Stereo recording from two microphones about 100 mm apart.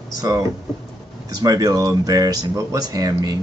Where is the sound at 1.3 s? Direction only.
40° right (ahead or behind).